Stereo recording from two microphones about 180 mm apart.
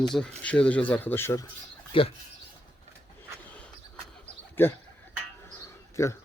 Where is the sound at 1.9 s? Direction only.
30° left (ahead or behind).